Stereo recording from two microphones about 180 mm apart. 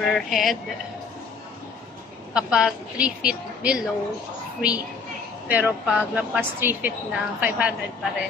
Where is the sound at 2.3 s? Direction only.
5° right (ahead or behind).